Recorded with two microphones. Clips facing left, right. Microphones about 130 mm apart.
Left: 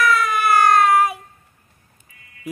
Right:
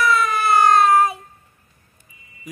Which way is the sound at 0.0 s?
25° right (ahead or behind).